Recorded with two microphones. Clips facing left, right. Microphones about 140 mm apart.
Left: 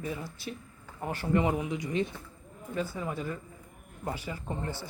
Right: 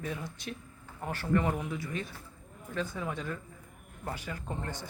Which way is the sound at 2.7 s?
5° left (ahead or behind).